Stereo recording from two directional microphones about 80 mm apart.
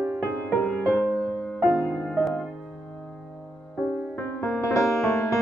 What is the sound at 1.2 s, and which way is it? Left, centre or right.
Music, left.